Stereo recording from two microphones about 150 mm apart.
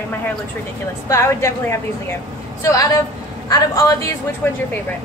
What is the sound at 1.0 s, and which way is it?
A woman's voice, 20° left (ahead or behind).